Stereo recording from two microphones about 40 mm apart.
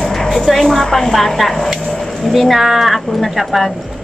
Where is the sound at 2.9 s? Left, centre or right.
Centre.